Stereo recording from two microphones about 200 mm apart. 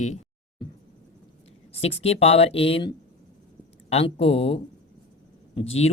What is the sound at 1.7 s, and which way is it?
Speech, 30° left (ahead or behind).